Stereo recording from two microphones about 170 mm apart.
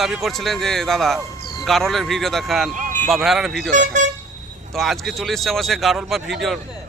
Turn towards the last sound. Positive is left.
turn(degrees=0)  # may be behind; listen again after turning